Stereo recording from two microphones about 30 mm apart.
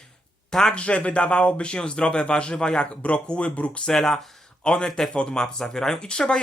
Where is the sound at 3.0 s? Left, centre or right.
Left.